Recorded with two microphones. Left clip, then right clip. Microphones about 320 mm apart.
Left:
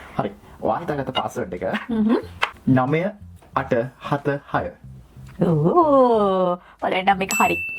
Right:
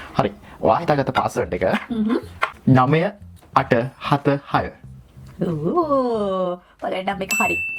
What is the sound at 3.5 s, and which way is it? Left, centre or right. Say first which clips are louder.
Speech: right 4 dB; right.